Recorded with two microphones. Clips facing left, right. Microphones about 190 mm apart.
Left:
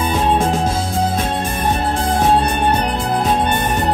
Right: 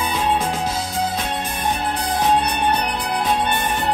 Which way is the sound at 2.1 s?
50° left (ahead or behind).